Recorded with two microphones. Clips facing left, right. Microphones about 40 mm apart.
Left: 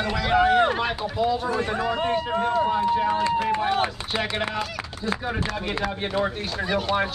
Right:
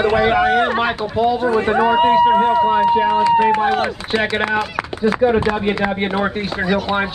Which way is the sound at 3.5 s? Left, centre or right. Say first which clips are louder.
Right 7 dB; right.